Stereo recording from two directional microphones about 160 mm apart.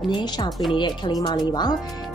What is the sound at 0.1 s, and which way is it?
Speech, 25° left (ahead or behind).